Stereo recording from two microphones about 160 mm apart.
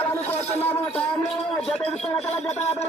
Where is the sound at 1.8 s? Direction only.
40° left (ahead or behind).